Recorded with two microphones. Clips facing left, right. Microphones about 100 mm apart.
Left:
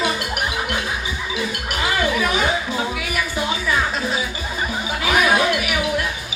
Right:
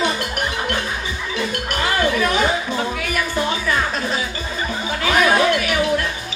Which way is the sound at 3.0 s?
10° left (ahead or behind).